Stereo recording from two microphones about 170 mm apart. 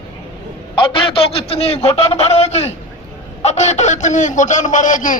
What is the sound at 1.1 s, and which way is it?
A man's voice, 35° left (ahead or behind).